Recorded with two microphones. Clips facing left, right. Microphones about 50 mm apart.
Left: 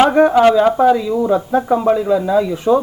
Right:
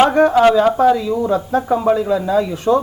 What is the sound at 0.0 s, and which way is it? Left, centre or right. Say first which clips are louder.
Speech: left 1 dB; centre.